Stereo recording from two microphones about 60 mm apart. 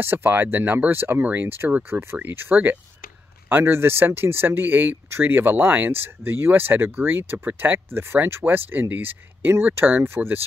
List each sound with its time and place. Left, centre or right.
0.0 s speech: right
2.5 s speech: right